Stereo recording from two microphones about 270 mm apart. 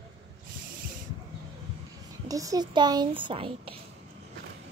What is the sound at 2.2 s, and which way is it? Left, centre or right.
Speech, centre.